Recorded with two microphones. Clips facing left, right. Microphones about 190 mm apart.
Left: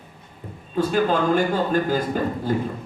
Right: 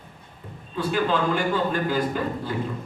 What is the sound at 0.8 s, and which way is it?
A man's voice, 45° left (ahead or behind).